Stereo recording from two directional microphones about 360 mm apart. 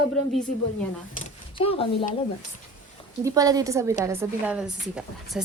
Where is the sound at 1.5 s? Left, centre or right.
Centre.